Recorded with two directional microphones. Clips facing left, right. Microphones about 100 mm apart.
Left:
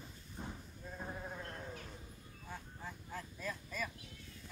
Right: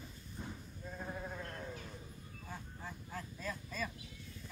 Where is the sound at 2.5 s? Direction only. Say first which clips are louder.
Even; centre (ahead or behind).